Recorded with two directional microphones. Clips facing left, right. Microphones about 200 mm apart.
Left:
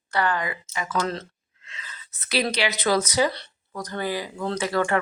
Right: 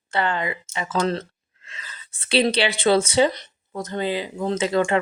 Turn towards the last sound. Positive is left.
turn(degrees=-20)  # may be behind; listen again after turning